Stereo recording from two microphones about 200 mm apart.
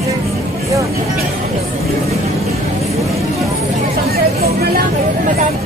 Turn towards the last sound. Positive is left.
turn(degrees=-50)  # may be behind; listen again after turning